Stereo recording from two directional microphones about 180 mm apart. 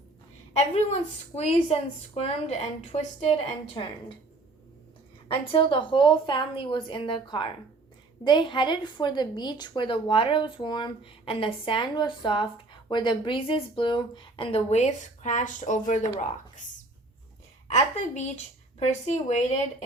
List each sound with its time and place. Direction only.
0.7 s a woman's voice: 35° left (ahead or behind)
5.3 s a woman's voice: 30° left (ahead or behind); by 16.0 s 45° left (ahead or behind)
17.7 s a woman's voice: 40° left (ahead or behind)